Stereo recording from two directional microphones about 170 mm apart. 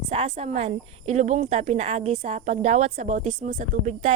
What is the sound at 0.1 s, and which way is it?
Speech, 40° right (ahead or behind).